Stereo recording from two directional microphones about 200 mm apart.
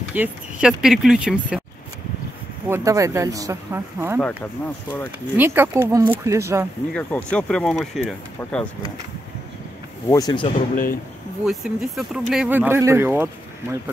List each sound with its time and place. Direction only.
0.1 s speech: 5° right (ahead or behind)
2.7 s speech: 15° right (ahead or behind)
5.4 s speech: 10° right (ahead or behind)
6.9 s speech: 5° left (ahead or behind)
10.0 s speech: 20° left (ahead or behind)
10.5 s speech: 45° left (ahead or behind)
11.4 s speech: centre (ahead or behind)